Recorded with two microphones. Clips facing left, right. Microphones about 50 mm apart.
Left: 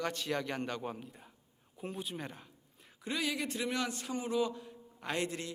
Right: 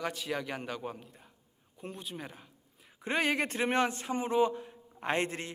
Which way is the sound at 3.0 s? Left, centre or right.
Right.